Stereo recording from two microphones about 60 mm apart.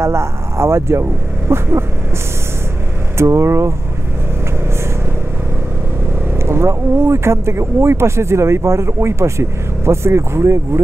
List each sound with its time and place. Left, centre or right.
0.0 s speech: right
1.5 s a sound: right
3.2 s speech: right
6.3 s speech: right